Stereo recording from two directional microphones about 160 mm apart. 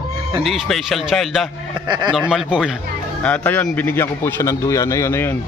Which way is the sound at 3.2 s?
10° left (ahead or behind).